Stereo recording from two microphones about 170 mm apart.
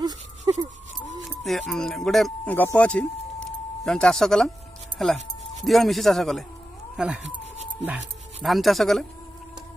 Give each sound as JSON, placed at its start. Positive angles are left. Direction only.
{"t": 0.5, "sound": "a sound", "side_deg": -25}
{"t": 1.4, "sound": "speech", "side_deg": 0}
{"t": 8.4, "sound": "speech", "side_deg": 0}